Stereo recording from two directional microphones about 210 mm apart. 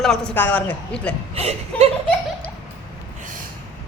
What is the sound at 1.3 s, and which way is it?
Speech, 30° right (ahead or behind).